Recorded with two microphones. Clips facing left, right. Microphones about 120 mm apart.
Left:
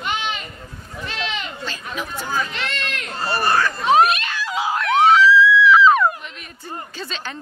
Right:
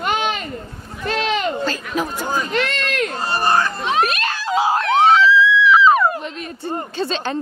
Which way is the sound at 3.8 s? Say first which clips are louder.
Left 4 dB; 40° left (ahead or behind).